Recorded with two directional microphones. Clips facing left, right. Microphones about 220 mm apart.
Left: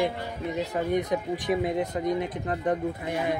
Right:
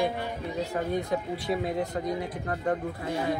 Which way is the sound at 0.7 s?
20° left (ahead or behind).